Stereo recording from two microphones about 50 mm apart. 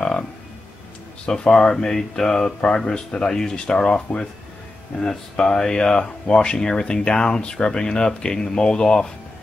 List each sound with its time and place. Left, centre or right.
1.2 s speech: centre